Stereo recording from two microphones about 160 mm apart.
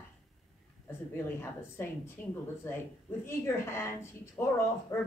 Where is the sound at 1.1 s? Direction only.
15° left (ahead or behind).